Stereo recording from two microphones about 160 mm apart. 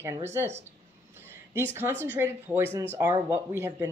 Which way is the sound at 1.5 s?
15° right (ahead or behind).